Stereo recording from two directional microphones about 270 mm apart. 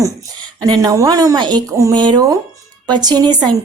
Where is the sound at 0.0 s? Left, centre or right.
Centre.